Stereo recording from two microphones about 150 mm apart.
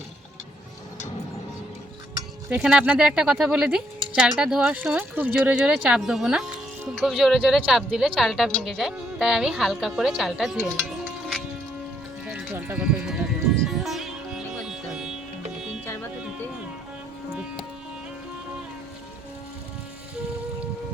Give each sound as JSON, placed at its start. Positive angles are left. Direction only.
{"t": 2.5, "sound": "speech", "side_deg": -10}
{"t": 12.2, "sound": "music", "side_deg": -5}